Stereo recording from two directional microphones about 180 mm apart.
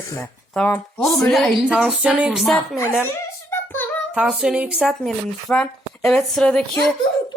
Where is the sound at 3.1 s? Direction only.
10° left (ahead or behind).